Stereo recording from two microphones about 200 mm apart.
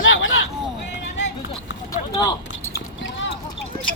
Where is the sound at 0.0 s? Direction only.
75° left (ahead or behind).